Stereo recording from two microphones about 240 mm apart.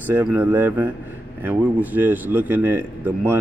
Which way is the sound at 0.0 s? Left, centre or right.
Centre.